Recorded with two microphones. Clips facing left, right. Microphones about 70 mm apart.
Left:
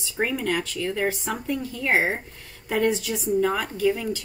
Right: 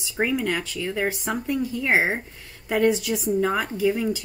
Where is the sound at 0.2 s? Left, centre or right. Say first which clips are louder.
Right 1 dB; centre.